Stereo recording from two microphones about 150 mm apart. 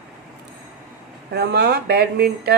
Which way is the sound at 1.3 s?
90° right.